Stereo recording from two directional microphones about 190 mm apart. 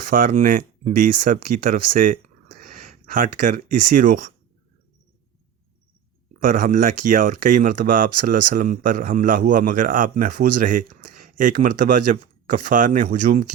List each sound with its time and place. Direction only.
0.0 s speech: 45° right (ahead or behind)
6.4 s speech: 45° right (ahead or behind)